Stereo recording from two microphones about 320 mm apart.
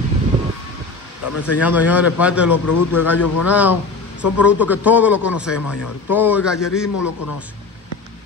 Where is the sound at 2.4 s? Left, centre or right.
Left.